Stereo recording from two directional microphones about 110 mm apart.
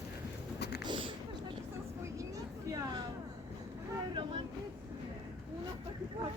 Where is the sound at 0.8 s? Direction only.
50° right (ahead or behind).